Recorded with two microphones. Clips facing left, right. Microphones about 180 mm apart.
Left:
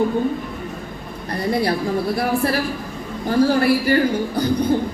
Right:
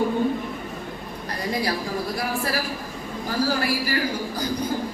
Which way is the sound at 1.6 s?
60° left (ahead or behind).